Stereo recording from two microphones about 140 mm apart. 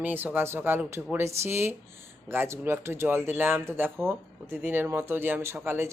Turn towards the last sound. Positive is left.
turn(degrees=-15)  # may be behind; listen again after turning